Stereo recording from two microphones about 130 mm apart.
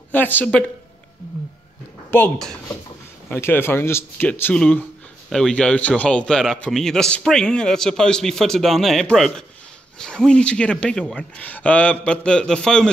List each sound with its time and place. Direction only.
0.1 s speech: 15° left (ahead or behind)
2.0 s a sound: 15° left (ahead or behind)
3.3 s a man's voice: 15° left (ahead or behind)